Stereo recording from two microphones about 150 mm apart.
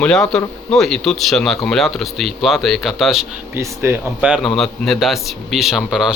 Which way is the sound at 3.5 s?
15° right (ahead or behind).